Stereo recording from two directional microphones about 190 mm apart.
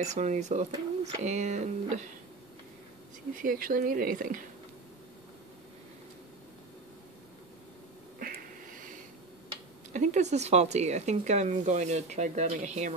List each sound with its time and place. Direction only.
0.0 s speech: 40° right (ahead or behind)
3.3 s speech: 45° right (ahead or behind)
9.9 s speech: 40° right (ahead or behind)